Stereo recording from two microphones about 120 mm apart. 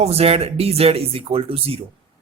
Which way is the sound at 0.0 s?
60° right (ahead or behind).